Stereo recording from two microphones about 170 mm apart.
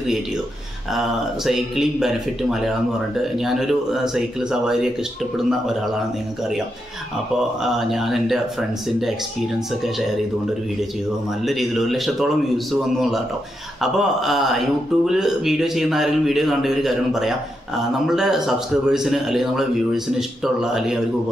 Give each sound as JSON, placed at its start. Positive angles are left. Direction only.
{"t": 0.9, "sound": "speech", "side_deg": 0}
{"t": 7.6, "sound": "speech", "side_deg": 0}
{"t": 11.4, "sound": "speech", "side_deg": 0}
{"t": 13.7, "sound": "speech", "side_deg": 0}